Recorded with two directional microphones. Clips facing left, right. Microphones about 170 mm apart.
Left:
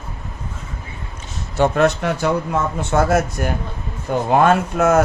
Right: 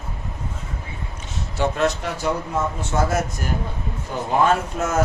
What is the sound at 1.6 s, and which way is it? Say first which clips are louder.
Speech: left 6 dB; 60° left (ahead or behind).